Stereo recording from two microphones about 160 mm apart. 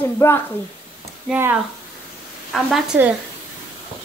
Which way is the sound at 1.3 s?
10° right (ahead or behind).